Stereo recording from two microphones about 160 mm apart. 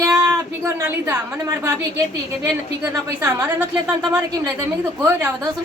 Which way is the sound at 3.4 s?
10° right (ahead or behind).